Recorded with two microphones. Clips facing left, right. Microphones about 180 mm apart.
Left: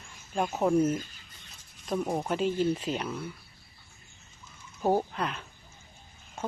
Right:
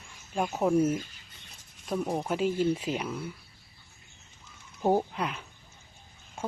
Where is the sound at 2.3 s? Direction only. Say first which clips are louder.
Right 1 dB; 10° right (ahead or behind).